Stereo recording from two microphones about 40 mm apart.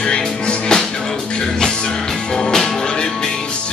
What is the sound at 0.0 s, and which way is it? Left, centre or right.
Music, left.